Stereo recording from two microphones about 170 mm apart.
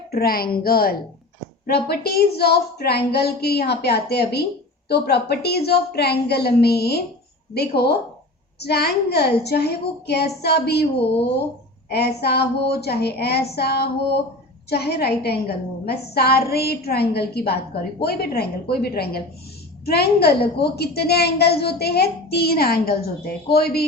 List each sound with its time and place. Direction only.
0.1 s a woman's voice: 65° left (ahead or behind)
11.9 s a woman's voice: 70° left (ahead or behind)